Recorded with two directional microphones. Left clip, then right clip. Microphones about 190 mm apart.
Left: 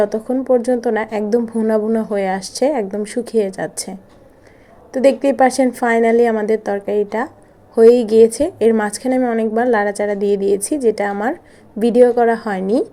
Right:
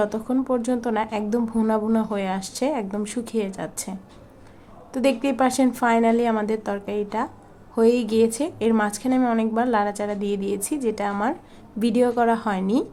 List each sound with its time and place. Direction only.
0.0 s a woman's voice: 15° left (ahead or behind)